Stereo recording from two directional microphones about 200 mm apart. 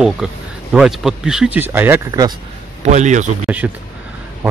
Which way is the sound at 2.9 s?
35° right (ahead or behind).